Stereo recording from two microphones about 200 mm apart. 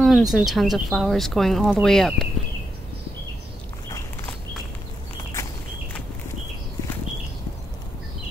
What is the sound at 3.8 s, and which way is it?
Walk, 15° left (ahead or behind).